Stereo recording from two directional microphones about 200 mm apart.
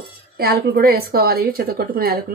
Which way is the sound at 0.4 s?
50° right (ahead or behind).